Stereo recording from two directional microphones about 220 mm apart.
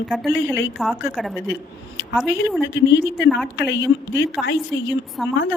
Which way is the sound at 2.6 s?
55° left (ahead or behind).